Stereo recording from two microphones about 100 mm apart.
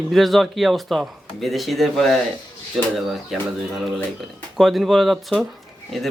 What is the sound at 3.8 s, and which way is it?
Speech, centre (ahead or behind).